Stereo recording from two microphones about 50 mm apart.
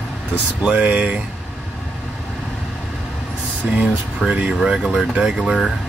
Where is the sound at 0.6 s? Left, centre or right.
Right.